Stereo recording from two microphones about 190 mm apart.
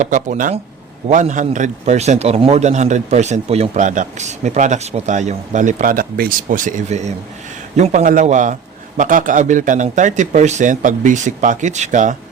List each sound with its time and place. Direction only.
0.0 s a man's voice: 40° right (ahead or behind)